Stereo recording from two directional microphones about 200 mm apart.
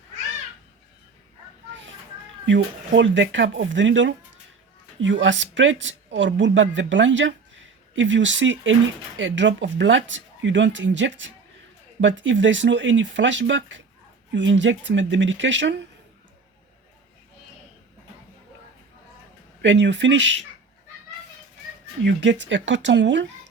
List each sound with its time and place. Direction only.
2.5 s speech: 65° right (ahead or behind)
19.6 s speech: 60° right (ahead or behind)
22.0 s speech: 65° right (ahead or behind)